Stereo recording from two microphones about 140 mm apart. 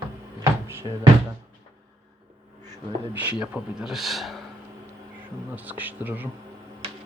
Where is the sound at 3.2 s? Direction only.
10° right (ahead or behind).